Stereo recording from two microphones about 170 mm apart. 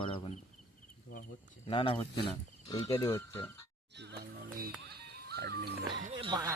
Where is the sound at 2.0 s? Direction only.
15° left (ahead or behind).